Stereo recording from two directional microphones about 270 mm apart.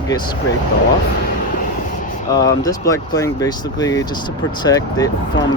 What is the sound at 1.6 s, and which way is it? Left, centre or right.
Vehicle, left.